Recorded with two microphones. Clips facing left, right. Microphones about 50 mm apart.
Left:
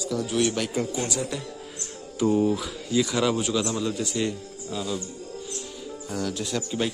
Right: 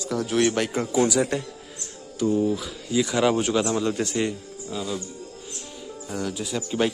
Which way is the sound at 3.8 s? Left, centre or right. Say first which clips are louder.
Right 3 dB; right.